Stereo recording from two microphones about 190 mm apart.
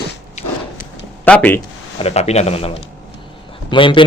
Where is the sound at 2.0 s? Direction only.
35° left (ahead or behind).